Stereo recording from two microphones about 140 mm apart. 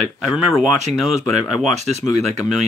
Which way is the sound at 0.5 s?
Centre (ahead or behind).